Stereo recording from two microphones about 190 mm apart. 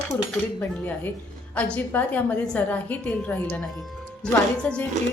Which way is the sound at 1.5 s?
5° left (ahead or behind).